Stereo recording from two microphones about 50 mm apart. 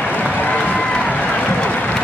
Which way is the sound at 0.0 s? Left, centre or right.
Left.